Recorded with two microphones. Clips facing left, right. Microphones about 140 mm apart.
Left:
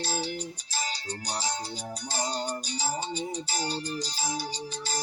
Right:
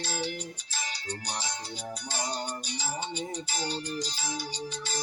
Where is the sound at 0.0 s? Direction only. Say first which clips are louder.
Left 2 dB; 35° left (ahead or behind).